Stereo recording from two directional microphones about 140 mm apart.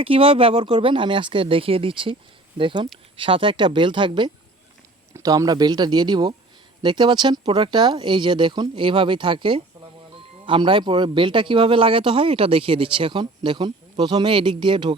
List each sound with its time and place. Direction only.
0.0 s a man's voice: 40° right (ahead or behind)
5.1 s a man's voice: 25° right (ahead or behind)